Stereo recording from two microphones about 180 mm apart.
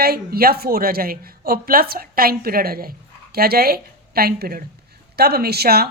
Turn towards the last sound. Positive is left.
turn(degrees=-60)  # may be behind; listen again after turning